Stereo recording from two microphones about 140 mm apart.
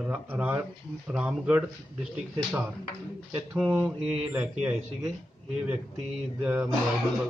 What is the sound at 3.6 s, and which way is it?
Speech, 10° right (ahead or behind).